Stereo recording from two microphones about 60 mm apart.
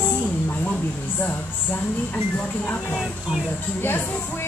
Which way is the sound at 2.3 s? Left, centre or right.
Left.